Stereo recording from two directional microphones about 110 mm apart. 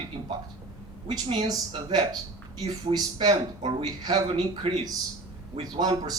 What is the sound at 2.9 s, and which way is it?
Speech, 50° right (ahead or behind).